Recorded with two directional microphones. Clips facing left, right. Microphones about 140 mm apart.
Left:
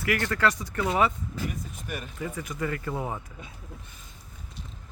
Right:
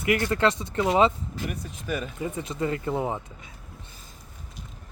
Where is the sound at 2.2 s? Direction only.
25° right (ahead or behind).